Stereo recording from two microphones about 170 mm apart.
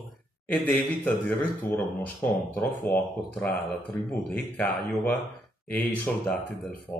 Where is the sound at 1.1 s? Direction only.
10° left (ahead or behind).